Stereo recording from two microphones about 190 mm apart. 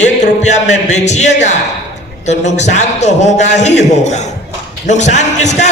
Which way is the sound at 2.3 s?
35° left (ahead or behind).